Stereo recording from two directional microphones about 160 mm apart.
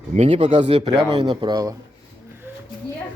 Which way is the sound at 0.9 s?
25° right (ahead or behind).